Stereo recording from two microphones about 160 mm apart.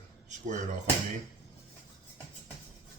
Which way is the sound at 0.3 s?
50° right (ahead or behind).